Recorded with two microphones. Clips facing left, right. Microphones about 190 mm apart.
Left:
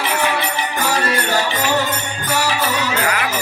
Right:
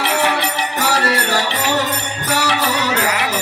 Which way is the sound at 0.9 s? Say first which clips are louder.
Right 1 dB; 70° right (ahead or behind).